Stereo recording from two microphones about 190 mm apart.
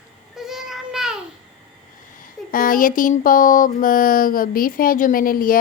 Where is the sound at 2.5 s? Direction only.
45° left (ahead or behind).